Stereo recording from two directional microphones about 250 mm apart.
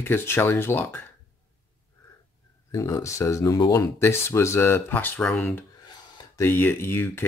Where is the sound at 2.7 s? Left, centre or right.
Centre.